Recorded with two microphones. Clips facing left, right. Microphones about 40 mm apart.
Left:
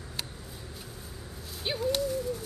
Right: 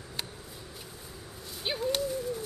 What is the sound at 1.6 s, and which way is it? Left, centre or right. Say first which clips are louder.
Bird: left 1 dB; centre.